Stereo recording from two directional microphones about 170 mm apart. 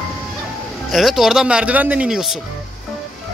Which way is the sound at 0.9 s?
Centre (ahead or behind).